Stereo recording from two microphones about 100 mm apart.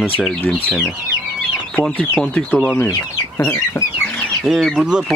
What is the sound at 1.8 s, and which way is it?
Speech, 5° left (ahead or behind).